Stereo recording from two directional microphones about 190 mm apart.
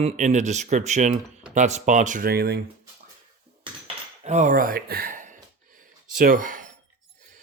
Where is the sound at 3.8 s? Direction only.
35° right (ahead or behind).